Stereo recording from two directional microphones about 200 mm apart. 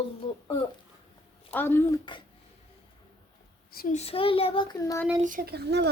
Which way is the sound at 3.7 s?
40° left (ahead or behind).